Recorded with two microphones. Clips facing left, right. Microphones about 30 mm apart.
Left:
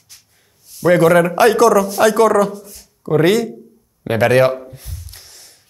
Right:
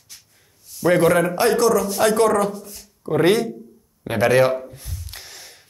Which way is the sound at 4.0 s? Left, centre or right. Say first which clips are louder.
Left 5 dB; left.